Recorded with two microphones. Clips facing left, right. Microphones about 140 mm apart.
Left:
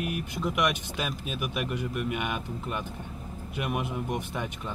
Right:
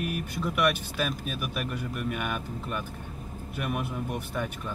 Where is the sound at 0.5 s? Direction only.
15° left (ahead or behind).